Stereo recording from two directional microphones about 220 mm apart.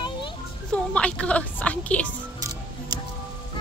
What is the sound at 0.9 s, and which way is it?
A woman's voice, 5° left (ahead or behind).